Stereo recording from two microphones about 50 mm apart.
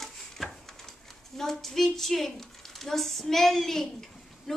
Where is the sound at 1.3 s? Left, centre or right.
Centre.